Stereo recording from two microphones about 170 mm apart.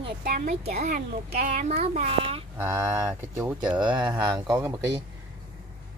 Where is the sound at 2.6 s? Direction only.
15° right (ahead or behind).